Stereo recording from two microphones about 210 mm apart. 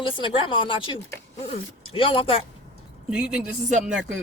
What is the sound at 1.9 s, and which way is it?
Speech, 25° left (ahead or behind).